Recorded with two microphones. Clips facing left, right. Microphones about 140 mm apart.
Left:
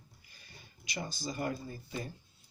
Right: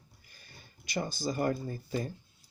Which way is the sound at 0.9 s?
50° right (ahead or behind).